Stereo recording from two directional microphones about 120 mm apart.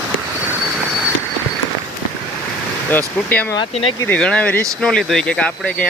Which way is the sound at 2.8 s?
15° left (ahead or behind).